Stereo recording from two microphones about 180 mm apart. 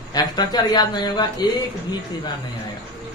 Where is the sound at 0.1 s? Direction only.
25° left (ahead or behind).